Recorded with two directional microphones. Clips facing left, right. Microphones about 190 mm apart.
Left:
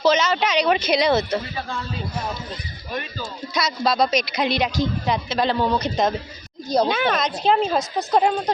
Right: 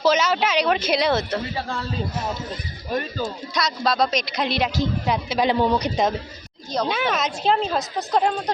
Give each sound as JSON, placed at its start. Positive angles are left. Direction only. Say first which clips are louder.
{"t": 0.0, "sound": "speech", "louder": "left 1 dB", "side_deg": -5}
{"t": 2.9, "sound": "speech", "louder": "right 5 dB", "side_deg": -50}
{"t": 3.5, "sound": "a woman's voice", "louder": "left 3 dB", "side_deg": 0}
{"t": 7.5, "sound": "a woman's voice", "louder": "left 4 dB", "side_deg": 5}